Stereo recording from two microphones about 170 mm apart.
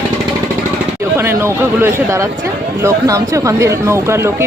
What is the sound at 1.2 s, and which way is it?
Speech, 15° right (ahead or behind).